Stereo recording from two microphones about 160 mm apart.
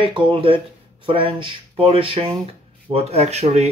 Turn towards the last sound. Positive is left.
turn(degrees=-40)  # may be behind; listen again after turning